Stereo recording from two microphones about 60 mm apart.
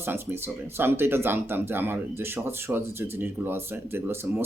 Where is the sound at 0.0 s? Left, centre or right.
Right.